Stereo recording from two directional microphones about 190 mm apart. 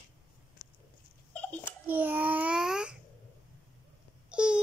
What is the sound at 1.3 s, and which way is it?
Babbling, 10° left (ahead or behind).